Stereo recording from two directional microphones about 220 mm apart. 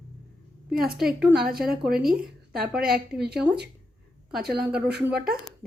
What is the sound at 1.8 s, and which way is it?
Speech, 45° right (ahead or behind).